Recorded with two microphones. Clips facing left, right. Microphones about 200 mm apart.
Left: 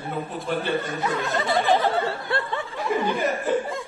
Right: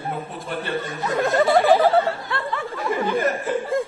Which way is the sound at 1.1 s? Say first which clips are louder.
Right 9 dB; 50° right (ahead or behind).